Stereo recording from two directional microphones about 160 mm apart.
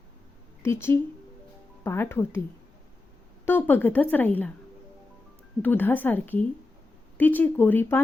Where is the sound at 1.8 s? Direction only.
15° left (ahead or behind).